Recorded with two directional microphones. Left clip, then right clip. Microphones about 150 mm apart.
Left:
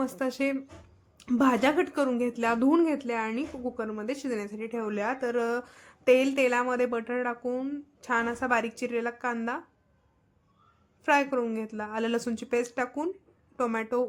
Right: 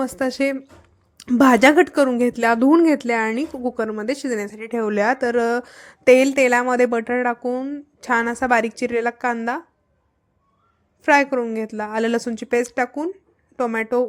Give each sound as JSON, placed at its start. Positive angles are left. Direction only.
{"t": 0.0, "sound": "a woman's voice", "side_deg": -35}
{"t": 1.4, "sound": "a woman's voice", "side_deg": -50}
{"t": 7.5, "sound": "a woman's voice", "side_deg": -25}
{"t": 8.0, "sound": "a woman's voice", "side_deg": -40}
{"t": 11.0, "sound": "a woman's voice", "side_deg": -35}